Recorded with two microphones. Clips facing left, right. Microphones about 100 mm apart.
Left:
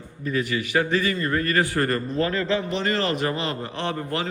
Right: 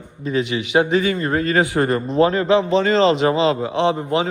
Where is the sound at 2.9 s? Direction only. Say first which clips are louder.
Right 10 dB; 90° right.